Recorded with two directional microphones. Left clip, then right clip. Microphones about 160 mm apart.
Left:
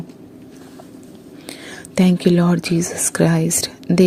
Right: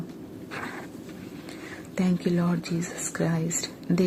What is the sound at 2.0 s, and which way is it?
Speech, 50° left (ahead or behind).